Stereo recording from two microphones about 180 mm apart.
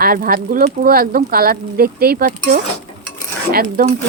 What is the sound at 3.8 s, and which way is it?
Speech, 55° right (ahead or behind).